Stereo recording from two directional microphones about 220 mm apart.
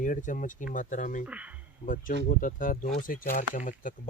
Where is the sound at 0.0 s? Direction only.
35° left (ahead or behind).